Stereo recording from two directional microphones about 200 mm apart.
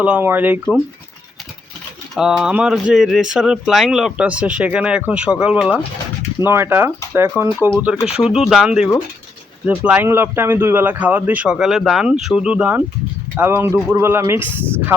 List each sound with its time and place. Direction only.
0.0 s speech: 10° right (ahead or behind)
2.1 s speech: 5° right (ahead or behind)